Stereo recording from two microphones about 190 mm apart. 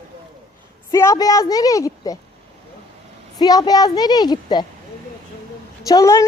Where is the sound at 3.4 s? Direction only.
20° left (ahead or behind).